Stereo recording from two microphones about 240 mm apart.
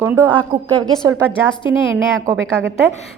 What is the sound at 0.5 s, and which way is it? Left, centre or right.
Speech, centre.